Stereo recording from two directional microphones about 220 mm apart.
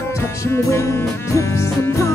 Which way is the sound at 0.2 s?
10° left (ahead or behind).